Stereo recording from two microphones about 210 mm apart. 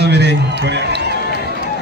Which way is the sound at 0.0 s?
55° right (ahead or behind).